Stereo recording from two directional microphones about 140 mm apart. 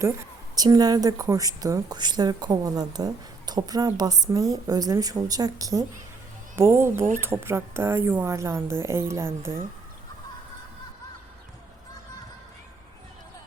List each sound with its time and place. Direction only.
0.5 s a woman's voice: 25° right (ahead or behind)